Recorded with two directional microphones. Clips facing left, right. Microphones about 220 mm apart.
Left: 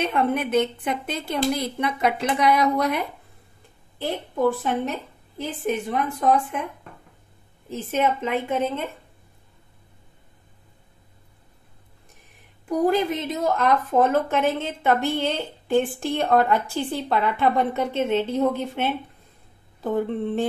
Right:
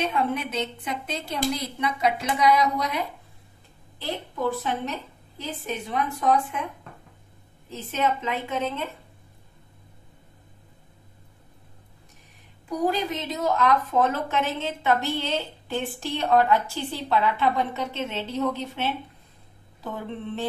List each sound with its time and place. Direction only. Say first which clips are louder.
0.0 s a woman's voice: left 3 dB; 55° left (ahead or behind)
4.0 s a woman's voice: left 6 dB; 50° left (ahead or behind)
7.9 s a woman's voice: left 3 dB; 50° left (ahead or behind)
12.6 s a woman's voice: left 5 dB; 50° left (ahead or behind)